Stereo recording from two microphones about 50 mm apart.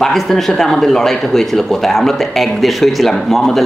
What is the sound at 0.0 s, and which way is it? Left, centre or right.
Speech, centre.